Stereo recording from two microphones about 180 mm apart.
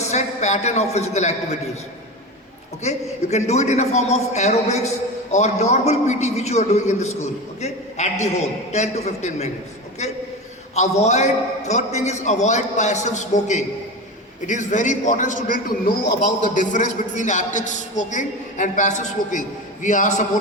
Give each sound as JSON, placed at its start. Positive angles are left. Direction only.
{"t": 0.1, "sound": "a man's voice", "side_deg": 40}
{"t": 2.8, "sound": "a man's voice", "side_deg": 40}